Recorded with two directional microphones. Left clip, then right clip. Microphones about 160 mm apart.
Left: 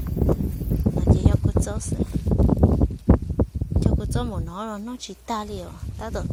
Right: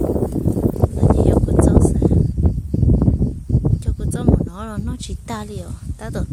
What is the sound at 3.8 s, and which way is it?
Speech, 15° right (ahead or behind).